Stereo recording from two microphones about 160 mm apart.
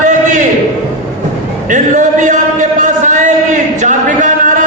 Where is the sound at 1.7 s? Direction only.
50° right (ahead or behind).